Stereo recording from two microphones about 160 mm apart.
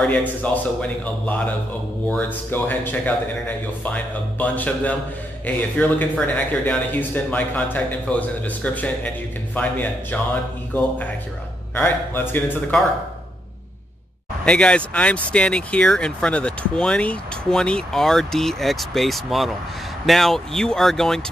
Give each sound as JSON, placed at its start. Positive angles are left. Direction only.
{"t": 0.0, "sound": "speech", "side_deg": 10}
{"t": 14.4, "sound": "speech", "side_deg": 5}